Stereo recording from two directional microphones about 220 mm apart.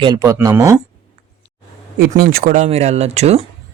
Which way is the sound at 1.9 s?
40° right (ahead or behind).